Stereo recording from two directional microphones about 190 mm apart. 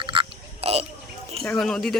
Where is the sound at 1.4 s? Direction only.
Centre (ahead or behind).